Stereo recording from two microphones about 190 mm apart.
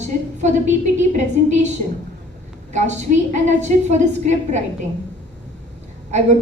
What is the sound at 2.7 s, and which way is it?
A woman's voice, 40° right (ahead or behind).